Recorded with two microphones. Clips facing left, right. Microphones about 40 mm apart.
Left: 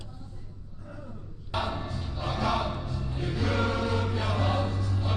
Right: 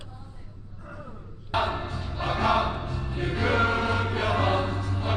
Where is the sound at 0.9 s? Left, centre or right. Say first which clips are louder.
Right 2 dB; right.